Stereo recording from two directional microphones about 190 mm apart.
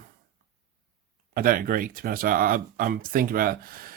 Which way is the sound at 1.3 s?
50° right (ahead or behind).